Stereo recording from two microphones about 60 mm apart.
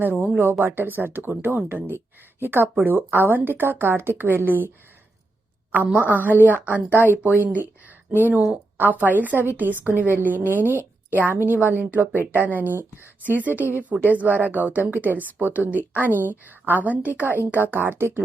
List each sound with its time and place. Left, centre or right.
0.0 s a woman's voice: right
5.7 s a woman's voice: right